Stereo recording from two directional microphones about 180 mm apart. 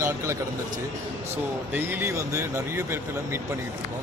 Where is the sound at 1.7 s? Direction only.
10° right (ahead or behind).